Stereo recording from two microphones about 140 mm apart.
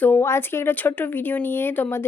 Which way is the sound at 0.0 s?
15° left (ahead or behind).